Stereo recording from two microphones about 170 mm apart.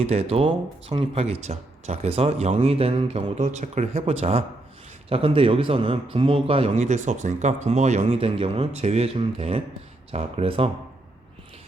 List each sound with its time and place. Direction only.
0.0 s a man's voice: 35° right (ahead or behind)